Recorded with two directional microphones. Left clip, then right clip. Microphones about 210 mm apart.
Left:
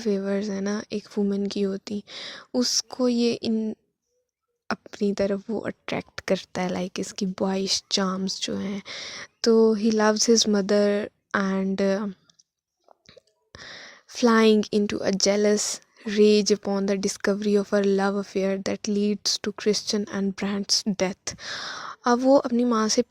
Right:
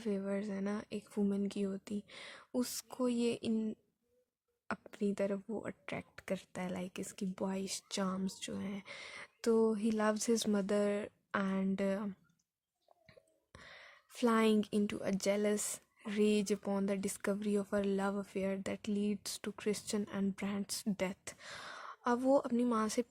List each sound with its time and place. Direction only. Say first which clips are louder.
0.0 s speech: left 13 dB; 30° left (ahead or behind)